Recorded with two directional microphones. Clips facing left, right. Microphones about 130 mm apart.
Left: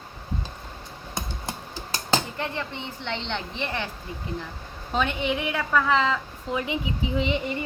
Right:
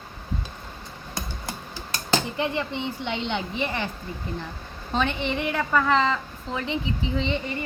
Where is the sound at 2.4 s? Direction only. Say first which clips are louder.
Right 5 dB; 15° right (ahead or behind).